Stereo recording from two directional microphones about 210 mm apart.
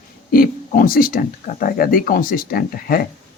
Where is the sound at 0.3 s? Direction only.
40° left (ahead or behind).